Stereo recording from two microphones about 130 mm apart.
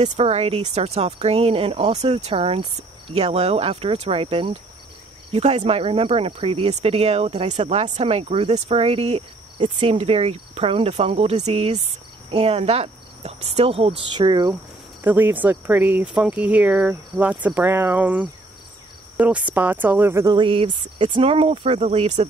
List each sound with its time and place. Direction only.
0.0 s cricket: 50° right (ahead or behind)
5.3 s cricket: 55° right (ahead or behind)
12.3 s speech: 50° right (ahead or behind)
14.1 s speech: 35° right (ahead or behind)
15.0 s speech: 15° right (ahead or behind)
20.2 s cricket: 40° right (ahead or behind)